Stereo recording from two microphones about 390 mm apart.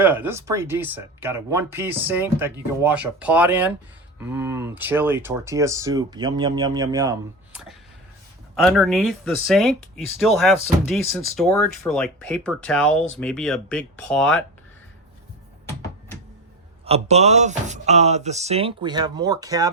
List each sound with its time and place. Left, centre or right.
0.0 s speech: centre
16.8 s speech: centre